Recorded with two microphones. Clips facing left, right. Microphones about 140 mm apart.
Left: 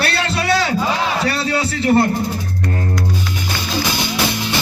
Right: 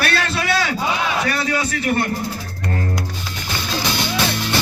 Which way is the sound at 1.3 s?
30° left (ahead or behind).